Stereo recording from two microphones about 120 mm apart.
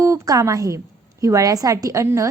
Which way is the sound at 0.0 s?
25° right (ahead or behind).